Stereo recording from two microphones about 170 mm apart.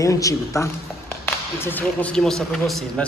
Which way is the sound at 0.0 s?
20° left (ahead or behind).